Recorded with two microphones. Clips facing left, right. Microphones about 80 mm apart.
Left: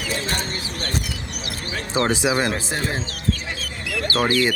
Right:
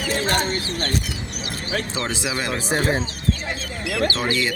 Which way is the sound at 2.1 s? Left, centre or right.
Left.